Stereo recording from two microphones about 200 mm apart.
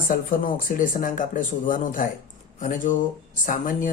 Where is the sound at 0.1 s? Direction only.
40° left (ahead or behind).